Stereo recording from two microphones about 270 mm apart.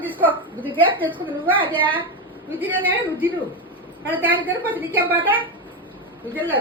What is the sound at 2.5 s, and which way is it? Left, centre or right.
A woman's voice, centre.